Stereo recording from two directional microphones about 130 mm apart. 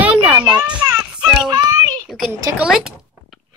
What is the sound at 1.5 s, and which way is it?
Speech, 30° right (ahead or behind).